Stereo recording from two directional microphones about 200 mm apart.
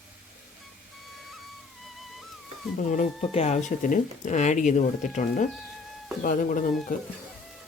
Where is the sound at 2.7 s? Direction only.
40° left (ahead or behind).